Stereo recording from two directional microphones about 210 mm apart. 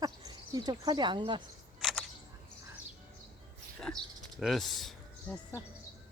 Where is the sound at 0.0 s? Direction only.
20° right (ahead or behind).